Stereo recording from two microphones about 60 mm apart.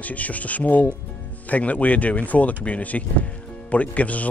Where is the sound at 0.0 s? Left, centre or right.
Left.